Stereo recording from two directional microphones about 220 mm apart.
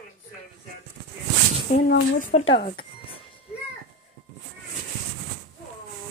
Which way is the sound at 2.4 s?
25° left (ahead or behind).